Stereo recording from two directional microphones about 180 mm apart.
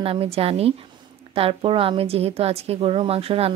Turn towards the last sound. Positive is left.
turn(degrees=-35)  # may be behind; listen again after turning